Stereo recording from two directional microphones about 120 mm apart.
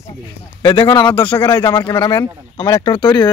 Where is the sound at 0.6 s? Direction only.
45° left (ahead or behind).